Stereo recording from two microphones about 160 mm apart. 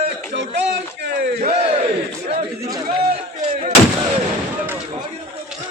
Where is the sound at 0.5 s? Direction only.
90° right.